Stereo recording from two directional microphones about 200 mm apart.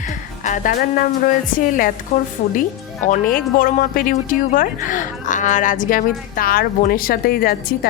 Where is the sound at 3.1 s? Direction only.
45° left (ahead or behind).